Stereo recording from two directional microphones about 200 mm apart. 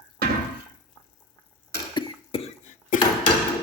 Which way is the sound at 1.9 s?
25° left (ahead or behind).